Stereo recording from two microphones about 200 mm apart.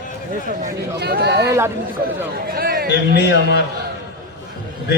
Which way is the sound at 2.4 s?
50° right (ahead or behind).